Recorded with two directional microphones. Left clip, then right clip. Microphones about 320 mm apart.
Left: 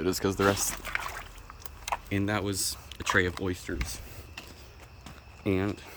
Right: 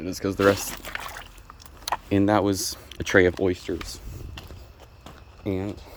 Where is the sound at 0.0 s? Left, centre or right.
Centre.